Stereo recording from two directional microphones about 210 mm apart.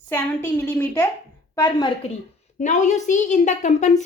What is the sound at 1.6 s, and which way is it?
Speech, 20° left (ahead or behind).